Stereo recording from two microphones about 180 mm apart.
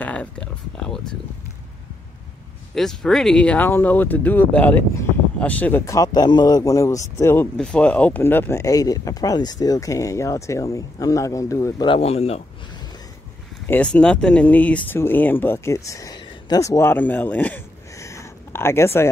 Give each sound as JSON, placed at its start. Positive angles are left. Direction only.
{"t": 0.0, "sound": "speech", "side_deg": 5}
{"t": 2.7, "sound": "speech", "side_deg": 0}
{"t": 11.9, "sound": "speech", "side_deg": 35}
{"t": 13.7, "sound": "speech", "side_deg": 5}